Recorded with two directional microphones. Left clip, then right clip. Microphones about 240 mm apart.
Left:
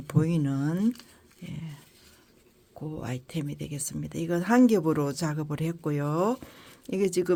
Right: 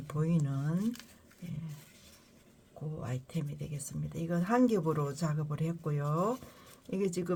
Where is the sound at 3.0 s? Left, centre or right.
Left.